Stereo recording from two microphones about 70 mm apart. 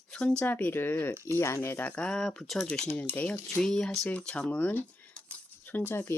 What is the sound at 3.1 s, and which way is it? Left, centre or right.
Speech, left.